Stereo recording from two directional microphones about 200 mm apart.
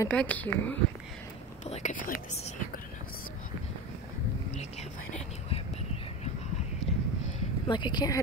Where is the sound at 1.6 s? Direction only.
35° left (ahead or behind).